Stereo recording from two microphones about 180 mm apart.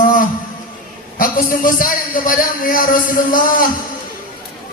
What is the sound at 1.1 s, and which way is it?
Speech, 50° left (ahead or behind).